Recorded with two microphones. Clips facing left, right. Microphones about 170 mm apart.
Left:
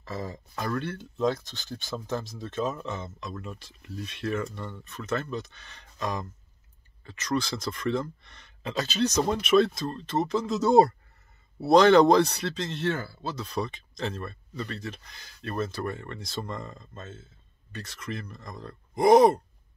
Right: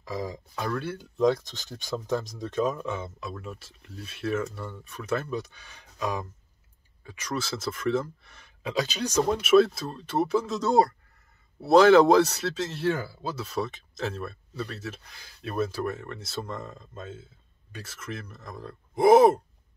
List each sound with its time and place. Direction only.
0.0 s speech: 10° right (ahead or behind)
10.6 s speech: 20° left (ahead or behind)
11.6 s speech: 5° right (ahead or behind)